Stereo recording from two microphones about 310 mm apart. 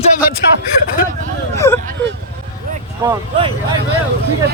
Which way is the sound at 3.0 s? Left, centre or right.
Centre.